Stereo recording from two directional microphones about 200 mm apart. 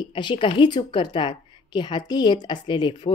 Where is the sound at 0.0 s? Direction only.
25° left (ahead or behind).